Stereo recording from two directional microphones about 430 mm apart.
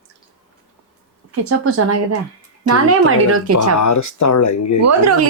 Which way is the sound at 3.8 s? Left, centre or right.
Left.